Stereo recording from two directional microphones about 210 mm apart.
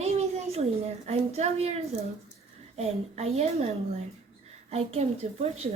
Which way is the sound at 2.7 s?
30° right (ahead or behind).